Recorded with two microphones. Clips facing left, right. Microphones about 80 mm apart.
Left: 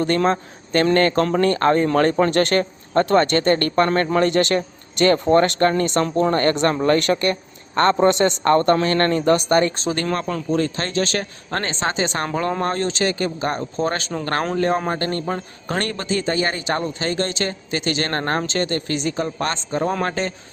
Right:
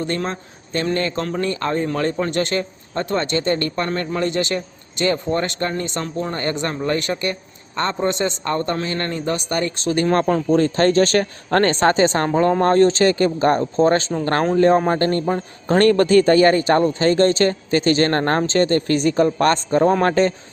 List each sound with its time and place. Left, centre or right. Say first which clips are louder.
0.0 s a man's voice: left 5 dB; left
10.1 s speech: right 9 dB; right
12.1 s speech: right 5 dB; right
15.8 s speech: right 12 dB; right
19.8 s speech: right 6 dB; right